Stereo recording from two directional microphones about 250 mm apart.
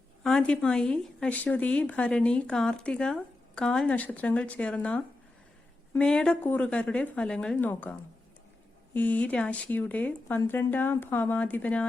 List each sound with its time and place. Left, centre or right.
0.2 s a woman's voice: centre